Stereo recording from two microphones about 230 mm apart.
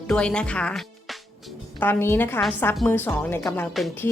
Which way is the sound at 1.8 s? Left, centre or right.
Centre.